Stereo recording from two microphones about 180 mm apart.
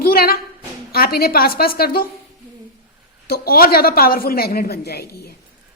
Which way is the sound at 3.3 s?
55° left (ahead or behind).